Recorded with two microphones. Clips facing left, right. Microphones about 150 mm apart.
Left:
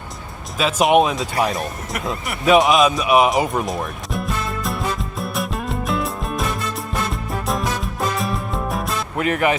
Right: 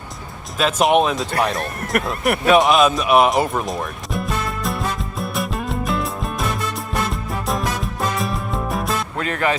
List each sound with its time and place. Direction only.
0.6 s speech: centre (ahead or behind)
1.9 s speech: 60° right (ahead or behind)
2.5 s music: centre (ahead or behind)
9.1 s speech: 15° left (ahead or behind)